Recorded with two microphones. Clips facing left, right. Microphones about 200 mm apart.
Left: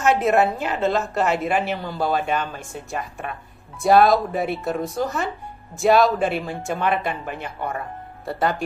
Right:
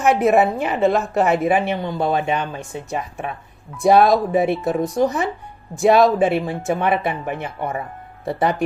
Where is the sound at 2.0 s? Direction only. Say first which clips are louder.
Right 1 dB; 15° right (ahead or behind).